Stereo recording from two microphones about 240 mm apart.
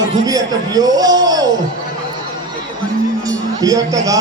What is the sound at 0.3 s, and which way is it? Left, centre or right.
A man's voice, centre.